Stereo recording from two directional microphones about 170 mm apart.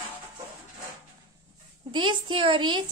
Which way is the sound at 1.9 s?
30° right (ahead or behind).